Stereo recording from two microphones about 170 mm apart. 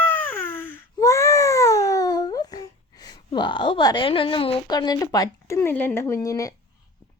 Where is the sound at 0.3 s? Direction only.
15° left (ahead or behind).